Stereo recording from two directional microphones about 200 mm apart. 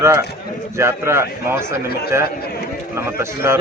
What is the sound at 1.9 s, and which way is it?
Speech, 50° left (ahead or behind).